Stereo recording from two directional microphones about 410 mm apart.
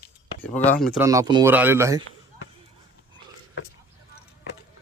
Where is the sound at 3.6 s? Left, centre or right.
Left.